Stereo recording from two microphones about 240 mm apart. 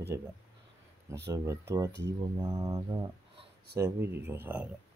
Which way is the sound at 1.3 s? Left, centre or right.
Centre.